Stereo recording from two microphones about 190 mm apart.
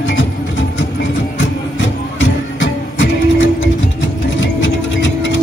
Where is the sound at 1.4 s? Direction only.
75° left (ahead or behind).